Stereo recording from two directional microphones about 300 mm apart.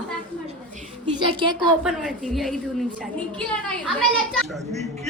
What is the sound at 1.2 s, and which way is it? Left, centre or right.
Speech, centre.